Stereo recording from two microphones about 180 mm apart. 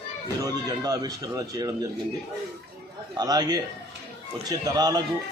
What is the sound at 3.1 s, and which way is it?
A man's voice, 20° right (ahead or behind).